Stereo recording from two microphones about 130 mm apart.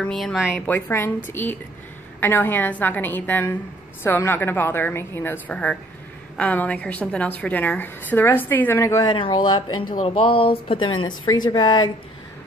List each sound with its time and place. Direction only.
0.0 s speech: centre (ahead or behind)
0.7 s a woman's voice: 15° left (ahead or behind)
9.0 s speech: 35° left (ahead or behind)